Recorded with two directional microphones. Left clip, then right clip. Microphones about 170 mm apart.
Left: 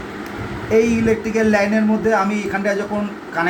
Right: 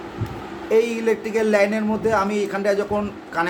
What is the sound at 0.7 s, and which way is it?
A man's voice, 40° right (ahead or behind).